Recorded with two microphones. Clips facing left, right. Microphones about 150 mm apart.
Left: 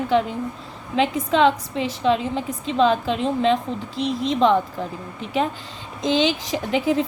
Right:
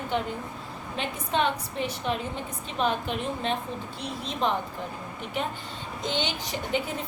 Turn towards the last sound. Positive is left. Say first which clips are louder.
# left 9 dB
turn(degrees=90)